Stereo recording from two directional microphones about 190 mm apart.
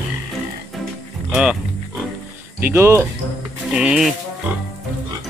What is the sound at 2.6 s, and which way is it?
Speech, 10° right (ahead or behind).